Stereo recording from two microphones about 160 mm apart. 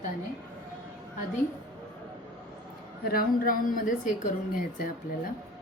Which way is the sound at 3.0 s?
65° left (ahead or behind).